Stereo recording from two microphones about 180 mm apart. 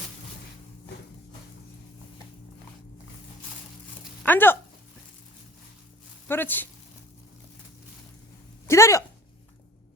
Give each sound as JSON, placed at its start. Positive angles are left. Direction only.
{"t": 4.2, "sound": "a sound", "side_deg": 10}
{"t": 6.2, "sound": "speech", "side_deg": 10}
{"t": 8.6, "sound": "speech", "side_deg": 15}